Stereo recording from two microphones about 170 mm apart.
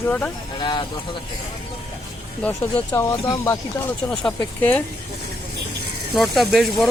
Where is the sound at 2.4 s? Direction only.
15° left (ahead or behind).